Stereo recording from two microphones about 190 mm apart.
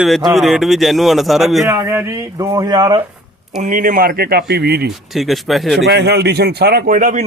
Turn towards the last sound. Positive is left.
turn(degrees=-45)  # may be behind; listen again after turning